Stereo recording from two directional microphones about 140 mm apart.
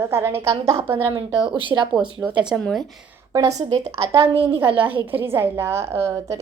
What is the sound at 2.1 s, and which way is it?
Speech, 10° right (ahead or behind).